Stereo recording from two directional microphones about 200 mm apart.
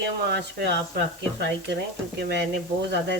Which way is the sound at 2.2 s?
55° right (ahead or behind).